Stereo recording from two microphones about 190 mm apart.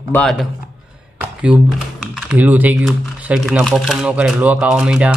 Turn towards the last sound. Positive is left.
turn(degrees=-5)  # may be behind; listen again after turning